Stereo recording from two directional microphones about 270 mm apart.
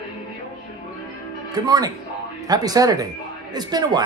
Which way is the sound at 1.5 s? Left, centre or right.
Centre.